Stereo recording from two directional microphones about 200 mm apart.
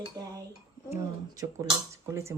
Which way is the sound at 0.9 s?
15° right (ahead or behind).